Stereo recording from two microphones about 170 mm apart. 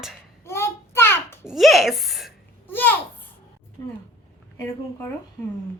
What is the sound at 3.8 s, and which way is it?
Speech, 20° left (ahead or behind).